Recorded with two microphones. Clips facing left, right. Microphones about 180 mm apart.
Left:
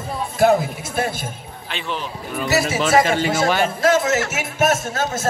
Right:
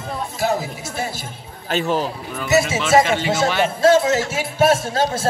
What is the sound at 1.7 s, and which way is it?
Speech, 40° right (ahead or behind).